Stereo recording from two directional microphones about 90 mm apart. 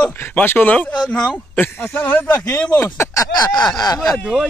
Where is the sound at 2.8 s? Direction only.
35° left (ahead or behind).